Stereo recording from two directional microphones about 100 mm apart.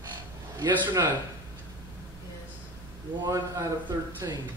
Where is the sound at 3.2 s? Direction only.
35° right (ahead or behind).